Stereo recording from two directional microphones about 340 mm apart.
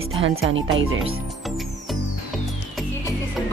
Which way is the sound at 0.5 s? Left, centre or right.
Right.